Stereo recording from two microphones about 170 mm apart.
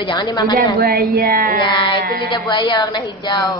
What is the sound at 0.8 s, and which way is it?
Speech, 65° right (ahead or behind).